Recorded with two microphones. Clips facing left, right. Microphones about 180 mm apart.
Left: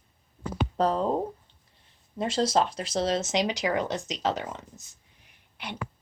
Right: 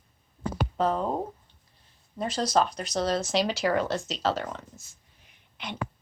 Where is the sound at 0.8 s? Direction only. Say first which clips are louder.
Left 1 dB; 35° left (ahead or behind).